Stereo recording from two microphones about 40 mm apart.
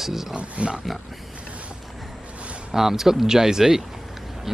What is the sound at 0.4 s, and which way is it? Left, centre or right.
Speech, right.